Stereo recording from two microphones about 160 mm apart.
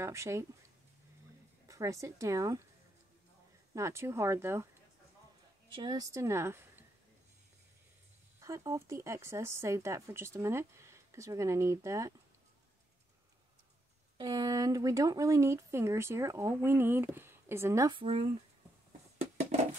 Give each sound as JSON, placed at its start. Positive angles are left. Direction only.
{"t": 0.0, "sound": "speech", "side_deg": -15}
{"t": 1.7, "sound": "a woman's voice", "side_deg": -20}
{"t": 3.7, "sound": "speech", "side_deg": -15}
{"t": 5.7, "sound": "speech", "side_deg": -25}
{"t": 8.4, "sound": "speech", "side_deg": -20}
{"t": 14.1, "sound": "speech", "side_deg": -25}
{"t": 17.9, "sound": "speech", "side_deg": -35}